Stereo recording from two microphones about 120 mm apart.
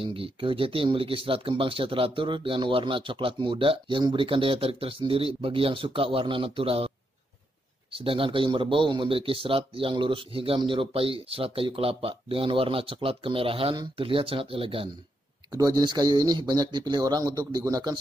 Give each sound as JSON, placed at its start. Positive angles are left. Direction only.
{"t": 0.0, "sound": "speech", "side_deg": -45}
{"t": 7.9, "sound": "speech", "side_deg": -50}
{"t": 15.5, "sound": "speech", "side_deg": -35}